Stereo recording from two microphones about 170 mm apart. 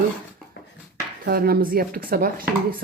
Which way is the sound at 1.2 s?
60° right (ahead or behind).